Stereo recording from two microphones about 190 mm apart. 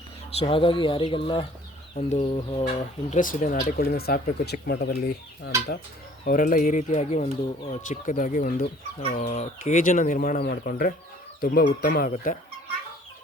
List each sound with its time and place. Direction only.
0.3 s speech: 30° left (ahead or behind)
3.2 s speech: 45° left (ahead or behind)
6.2 s speech: 45° left (ahead or behind)